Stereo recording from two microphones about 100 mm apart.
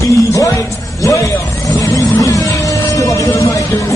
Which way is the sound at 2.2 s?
35° left (ahead or behind).